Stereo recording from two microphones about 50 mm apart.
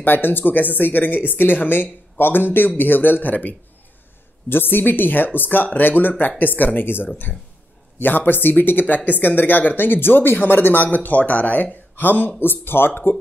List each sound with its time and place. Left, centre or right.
0.0 s speech: left
4.5 s speech: left